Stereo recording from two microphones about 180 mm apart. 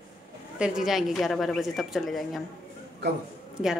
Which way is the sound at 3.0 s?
65° right (ahead or behind).